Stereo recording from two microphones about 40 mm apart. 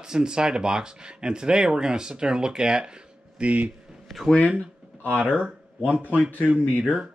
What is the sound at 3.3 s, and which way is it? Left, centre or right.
Speech, right.